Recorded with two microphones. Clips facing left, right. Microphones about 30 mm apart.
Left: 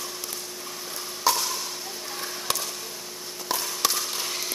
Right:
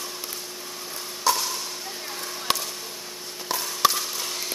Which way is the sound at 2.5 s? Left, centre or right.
Right.